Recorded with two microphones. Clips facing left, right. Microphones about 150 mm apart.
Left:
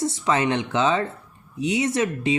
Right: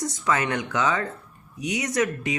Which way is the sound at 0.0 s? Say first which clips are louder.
Left 3 dB; 25° left (ahead or behind).